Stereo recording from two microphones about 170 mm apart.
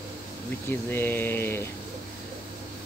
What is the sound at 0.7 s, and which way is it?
Speech, 10° left (ahead or behind).